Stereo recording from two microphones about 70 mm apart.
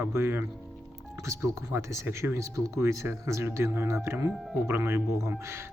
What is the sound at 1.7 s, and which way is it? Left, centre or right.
Speech, right.